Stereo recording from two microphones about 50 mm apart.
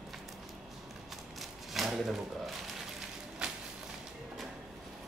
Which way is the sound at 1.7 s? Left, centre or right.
Centre.